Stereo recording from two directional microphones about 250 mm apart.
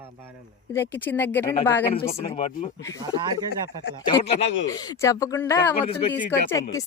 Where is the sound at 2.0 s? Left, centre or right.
Left.